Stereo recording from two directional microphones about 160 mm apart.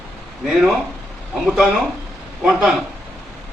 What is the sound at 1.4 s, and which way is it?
A man's voice, 5° right (ahead or behind).